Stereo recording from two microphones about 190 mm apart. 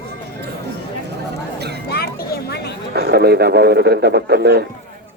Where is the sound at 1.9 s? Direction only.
55° left (ahead or behind).